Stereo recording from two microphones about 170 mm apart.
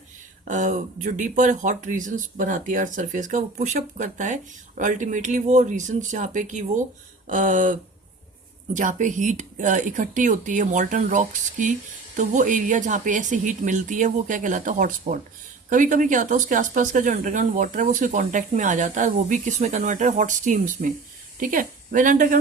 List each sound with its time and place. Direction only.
0.4 s speech: 50° right (ahead or behind)